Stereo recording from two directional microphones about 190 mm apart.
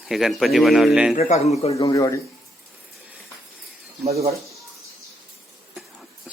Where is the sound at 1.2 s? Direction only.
35° left (ahead or behind).